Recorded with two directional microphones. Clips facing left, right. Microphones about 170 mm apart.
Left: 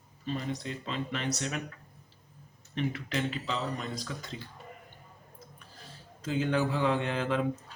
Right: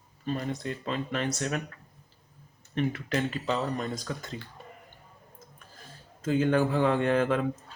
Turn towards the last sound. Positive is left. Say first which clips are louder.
# right 5 dB
turn(degrees=-50)  # may be behind; listen again after turning